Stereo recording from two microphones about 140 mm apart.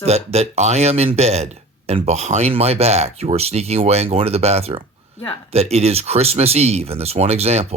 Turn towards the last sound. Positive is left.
turn(degrees=-45)  # may be behind; listen again after turning